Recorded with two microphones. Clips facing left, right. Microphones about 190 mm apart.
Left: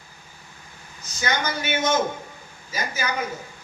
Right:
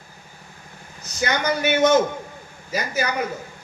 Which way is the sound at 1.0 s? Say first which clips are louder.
Right 4 dB; 65° right (ahead or behind).